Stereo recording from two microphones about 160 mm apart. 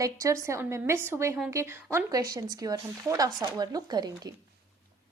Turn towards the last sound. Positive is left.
turn(degrees=-25)  # may be behind; listen again after turning